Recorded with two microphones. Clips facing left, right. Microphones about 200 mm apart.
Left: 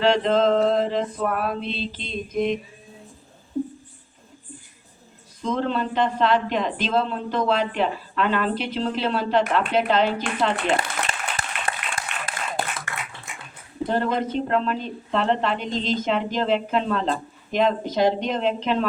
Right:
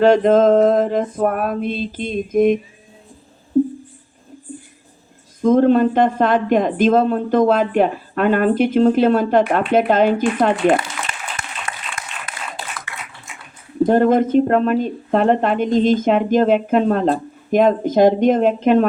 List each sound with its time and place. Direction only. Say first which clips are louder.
0.0 s speech: right 7 dB; 50° right (ahead or behind)
5.4 s speech: right 12 dB; 50° right (ahead or behind)
11.3 s applause: left 1 dB; 30° left (ahead or behind)
12.9 s a sound: left 1 dB; 45° left (ahead or behind)
13.8 s speech: right 10 dB; 50° right (ahead or behind)